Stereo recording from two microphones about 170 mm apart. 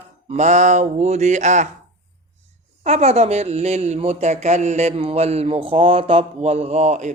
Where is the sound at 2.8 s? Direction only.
40° right (ahead or behind).